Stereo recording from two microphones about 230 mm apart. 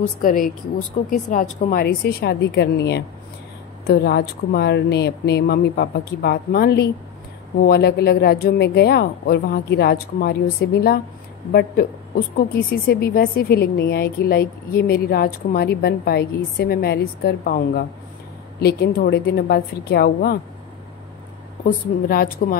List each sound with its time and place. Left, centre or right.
0.2 s a woman's voice: left
12.4 s a woman's voice: left
21.6 s speech: left